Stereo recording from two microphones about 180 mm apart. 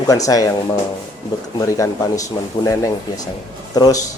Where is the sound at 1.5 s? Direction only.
20° left (ahead or behind).